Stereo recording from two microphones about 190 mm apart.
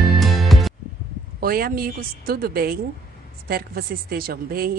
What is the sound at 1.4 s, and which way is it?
Speech, 50° right (ahead or behind).